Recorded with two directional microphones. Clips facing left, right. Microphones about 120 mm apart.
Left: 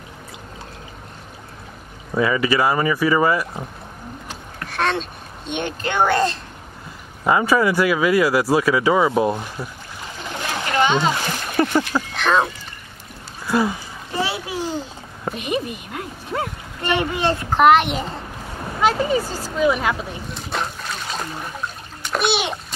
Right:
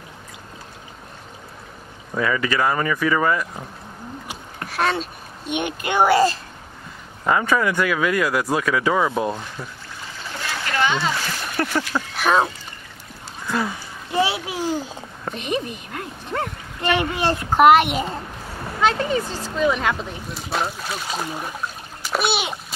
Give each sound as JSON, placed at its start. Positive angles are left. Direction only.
{"t": 2.1, "sound": "speech", "side_deg": 10}
{"t": 4.6, "sound": "a sound", "side_deg": -5}
{"t": 5.5, "sound": "a child's voice", "side_deg": -10}
{"t": 7.2, "sound": "speech", "side_deg": 10}
{"t": 10.2, "sound": "splash", "side_deg": 20}
{"t": 12.2, "sound": "speech", "side_deg": -10}
{"t": 13.5, "sound": "speech", "side_deg": 10}
{"t": 14.1, "sound": "a sound", "side_deg": -15}
{"t": 15.2, "sound": "a woman's voice", "side_deg": 5}
{"t": 17.3, "sound": "a child's voice", "side_deg": -10}
{"t": 18.8, "sound": "speech", "side_deg": 5}
{"t": 22.0, "sound": "water", "side_deg": -5}